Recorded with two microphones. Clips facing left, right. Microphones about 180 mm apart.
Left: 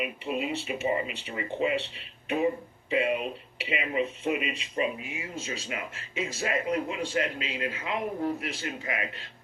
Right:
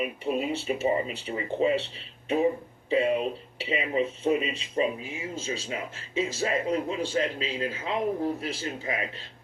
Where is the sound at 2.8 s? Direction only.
30° right (ahead or behind).